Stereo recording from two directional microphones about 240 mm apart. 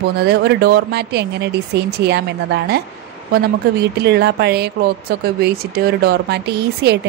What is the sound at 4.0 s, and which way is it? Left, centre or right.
Speech, right.